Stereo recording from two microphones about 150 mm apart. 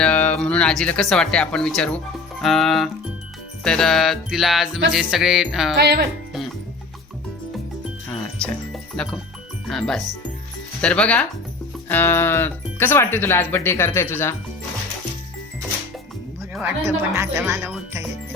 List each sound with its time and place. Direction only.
0.0 s music: 10° left (ahead or behind)
5.8 s speech: 90° right
8.4 s music: 5° left (ahead or behind)
10.8 s speech: 5° left (ahead or behind)
16.8 s speech: 20° right (ahead or behind)